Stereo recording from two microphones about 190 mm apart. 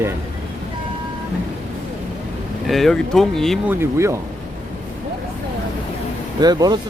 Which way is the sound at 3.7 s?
15° right (ahead or behind).